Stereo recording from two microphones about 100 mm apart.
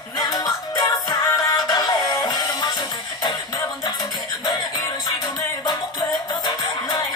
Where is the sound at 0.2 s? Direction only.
40° left (ahead or behind).